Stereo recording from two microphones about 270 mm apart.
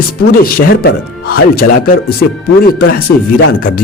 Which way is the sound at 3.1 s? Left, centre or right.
Left.